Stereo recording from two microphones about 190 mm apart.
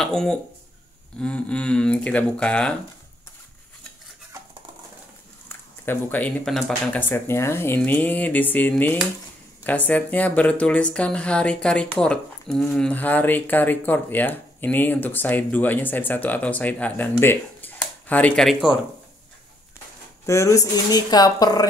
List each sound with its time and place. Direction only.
0.0 s speech: 5° left (ahead or behind)
5.5 s speech: 10° left (ahead or behind)
20.2 s speech: 15° left (ahead or behind)